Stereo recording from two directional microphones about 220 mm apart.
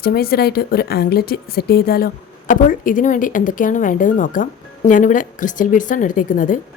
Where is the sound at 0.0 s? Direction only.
45° left (ahead or behind).